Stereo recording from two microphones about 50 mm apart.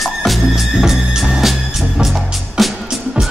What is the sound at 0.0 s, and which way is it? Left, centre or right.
Music, centre.